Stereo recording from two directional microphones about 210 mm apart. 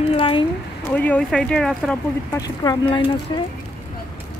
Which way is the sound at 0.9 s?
5° left (ahead or behind).